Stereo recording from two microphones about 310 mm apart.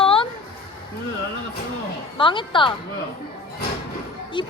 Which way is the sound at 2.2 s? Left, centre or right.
Centre.